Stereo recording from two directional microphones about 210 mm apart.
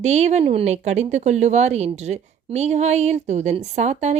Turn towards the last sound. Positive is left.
turn(degrees=-30)  # may be behind; listen again after turning